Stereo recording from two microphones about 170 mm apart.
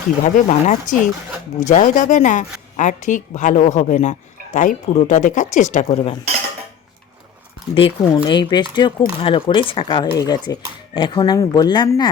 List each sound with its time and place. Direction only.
0.3 s a woman's voice: 50° left (ahead or behind)
7.8 s speech: 30° left (ahead or behind)